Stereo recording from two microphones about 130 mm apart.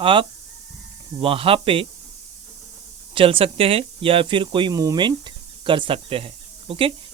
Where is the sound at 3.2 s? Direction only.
45° right (ahead or behind).